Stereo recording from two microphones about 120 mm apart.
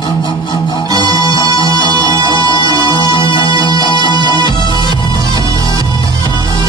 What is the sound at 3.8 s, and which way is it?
Music, 40° left (ahead or behind).